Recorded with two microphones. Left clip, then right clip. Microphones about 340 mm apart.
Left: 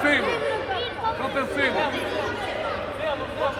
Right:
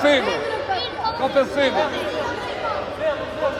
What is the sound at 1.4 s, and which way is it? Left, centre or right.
Speech, right.